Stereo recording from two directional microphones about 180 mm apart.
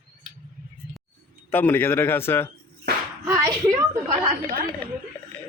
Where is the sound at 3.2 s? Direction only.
15° right (ahead or behind).